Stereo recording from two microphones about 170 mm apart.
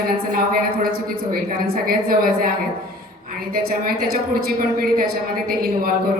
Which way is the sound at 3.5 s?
60° right (ahead or behind).